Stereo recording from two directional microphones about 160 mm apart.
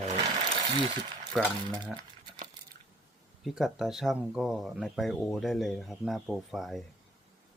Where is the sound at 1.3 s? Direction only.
10° left (ahead or behind).